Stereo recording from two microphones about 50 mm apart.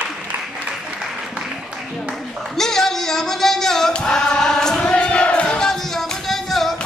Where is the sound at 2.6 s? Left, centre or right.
Centre.